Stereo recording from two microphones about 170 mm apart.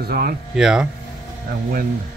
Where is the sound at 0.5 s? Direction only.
5° right (ahead or behind).